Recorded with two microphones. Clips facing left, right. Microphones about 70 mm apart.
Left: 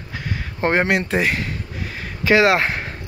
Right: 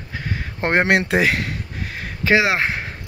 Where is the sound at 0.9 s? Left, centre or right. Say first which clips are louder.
Right 2 dB; right.